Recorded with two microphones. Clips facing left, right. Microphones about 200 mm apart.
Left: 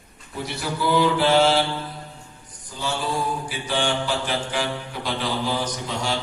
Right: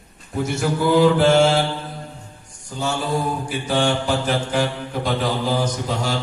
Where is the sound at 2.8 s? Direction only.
45° right (ahead or behind).